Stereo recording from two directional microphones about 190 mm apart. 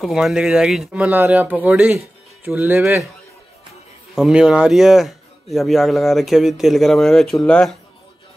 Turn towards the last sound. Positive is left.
turn(degrees=5)  # may be behind; listen again after turning